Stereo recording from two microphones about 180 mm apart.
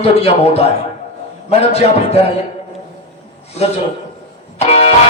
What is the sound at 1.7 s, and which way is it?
Speech, 35° left (ahead or behind).